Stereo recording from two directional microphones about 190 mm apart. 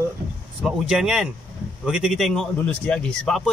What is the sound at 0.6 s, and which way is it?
A man's voice, centre (ahead or behind).